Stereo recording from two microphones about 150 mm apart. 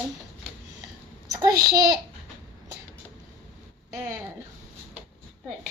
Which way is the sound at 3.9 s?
20° right (ahead or behind).